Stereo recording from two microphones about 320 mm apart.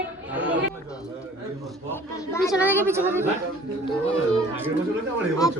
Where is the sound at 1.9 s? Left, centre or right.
Centre.